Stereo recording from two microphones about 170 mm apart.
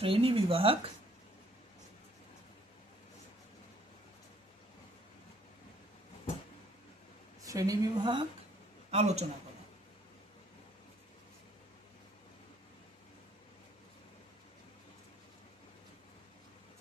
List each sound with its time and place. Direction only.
0.0 s speech: 35° right (ahead or behind)
7.4 s a woman's voice: 20° right (ahead or behind)
8.9 s speech: 40° right (ahead or behind)